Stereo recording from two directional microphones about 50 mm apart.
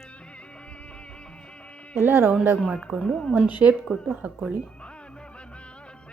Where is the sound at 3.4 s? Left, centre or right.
Right.